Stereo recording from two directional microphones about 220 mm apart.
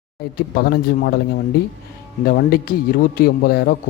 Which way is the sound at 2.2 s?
45° left (ahead or behind).